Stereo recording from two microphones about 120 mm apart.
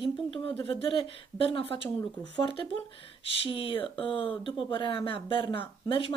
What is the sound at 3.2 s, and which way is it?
Speech, 50° left (ahead or behind).